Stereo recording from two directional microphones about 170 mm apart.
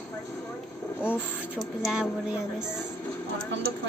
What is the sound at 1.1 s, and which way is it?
Speech, centre (ahead or behind).